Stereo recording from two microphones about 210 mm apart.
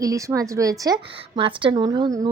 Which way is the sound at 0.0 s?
15° right (ahead or behind).